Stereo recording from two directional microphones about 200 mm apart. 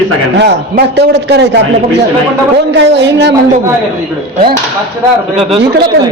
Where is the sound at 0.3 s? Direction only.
55° right (ahead or behind).